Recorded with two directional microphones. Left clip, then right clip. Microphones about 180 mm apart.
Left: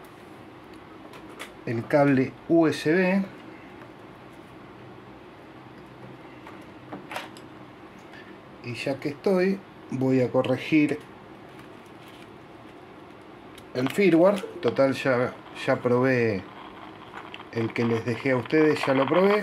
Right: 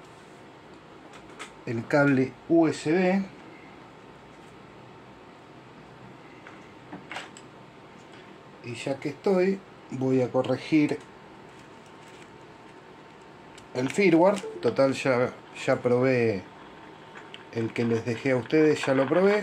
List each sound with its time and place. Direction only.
1.6 s speech: centre (ahead or behind)
2.6 s speech: 20° left (ahead or behind)
8.6 s speech: 5° left (ahead or behind)
10.0 s speech: 25° left (ahead or behind)
13.7 s speech: 5° left (ahead or behind)